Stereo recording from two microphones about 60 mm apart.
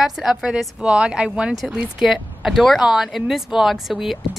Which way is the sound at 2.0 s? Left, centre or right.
Centre.